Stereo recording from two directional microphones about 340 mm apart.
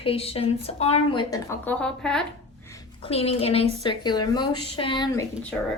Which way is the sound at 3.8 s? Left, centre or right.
Centre.